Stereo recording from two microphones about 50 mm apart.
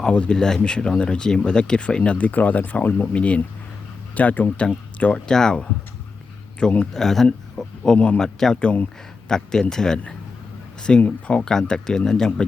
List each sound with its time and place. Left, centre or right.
0.0 s speech: left
2.1 s speech: left
3.1 s speech: left
5.1 s speech: centre
6.9 s speech: centre
7.3 s a sound: centre
7.9 s speech: left
8.2 s speech: centre
8.5 s speech: left
9.3 s speech: centre